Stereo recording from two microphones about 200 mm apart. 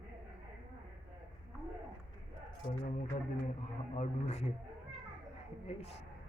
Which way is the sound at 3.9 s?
35° left (ahead or behind).